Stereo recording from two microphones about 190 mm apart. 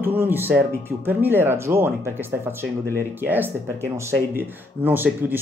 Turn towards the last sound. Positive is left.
turn(degrees=-10)  # may be behind; listen again after turning